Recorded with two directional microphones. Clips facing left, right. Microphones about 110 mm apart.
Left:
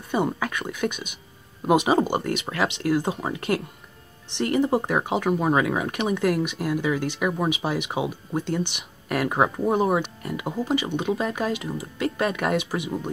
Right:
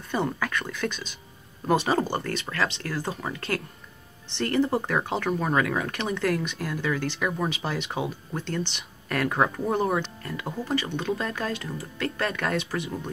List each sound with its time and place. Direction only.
0.1 s speech: 15° left (ahead or behind)